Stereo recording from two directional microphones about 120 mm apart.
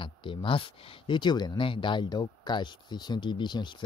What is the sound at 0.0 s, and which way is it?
Speech, 45° left (ahead or behind).